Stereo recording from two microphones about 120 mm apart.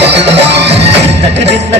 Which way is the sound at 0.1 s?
60° right (ahead or behind).